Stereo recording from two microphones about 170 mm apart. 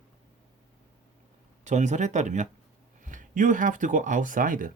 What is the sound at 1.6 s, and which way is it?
Speech, 45° right (ahead or behind).